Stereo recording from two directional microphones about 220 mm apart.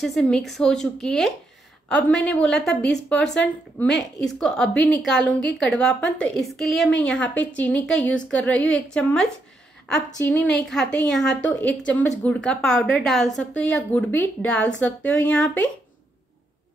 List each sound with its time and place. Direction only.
0.0 s a woman's voice: centre (ahead or behind)
4.2 s a woman's voice: 5° left (ahead or behind)